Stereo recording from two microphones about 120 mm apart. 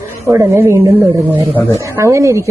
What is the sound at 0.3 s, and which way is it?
A woman's voice, 20° right (ahead or behind).